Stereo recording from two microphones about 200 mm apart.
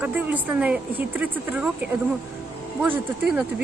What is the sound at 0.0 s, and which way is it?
Speech, 10° right (ahead or behind).